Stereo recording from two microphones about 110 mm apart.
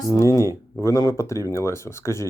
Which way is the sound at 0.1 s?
30° left (ahead or behind).